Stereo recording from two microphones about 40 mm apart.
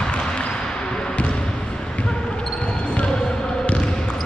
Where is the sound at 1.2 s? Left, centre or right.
Left.